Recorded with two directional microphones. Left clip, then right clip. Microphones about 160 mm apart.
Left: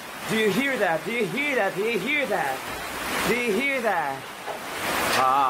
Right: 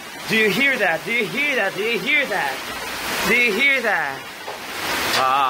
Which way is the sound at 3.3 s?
10° left (ahead or behind).